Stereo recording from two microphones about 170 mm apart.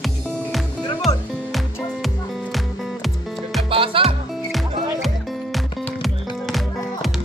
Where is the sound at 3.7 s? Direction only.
30° right (ahead or behind).